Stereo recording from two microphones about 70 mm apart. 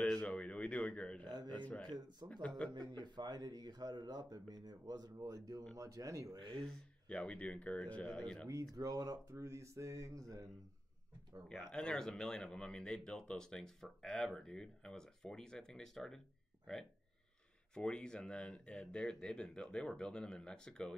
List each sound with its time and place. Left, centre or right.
0.0 s a sound: centre
1.9 s speech: right
2.6 s speech: centre
3.0 s speech: right
6.3 s speech: right
6.6 s speech: centre
8.7 s speech: right
9.3 s speech: right
11.4 s speech: centre
17.7 s speech: centre